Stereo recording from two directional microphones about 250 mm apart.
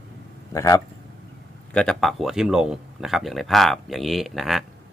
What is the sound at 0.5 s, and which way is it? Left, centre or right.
Speech, centre.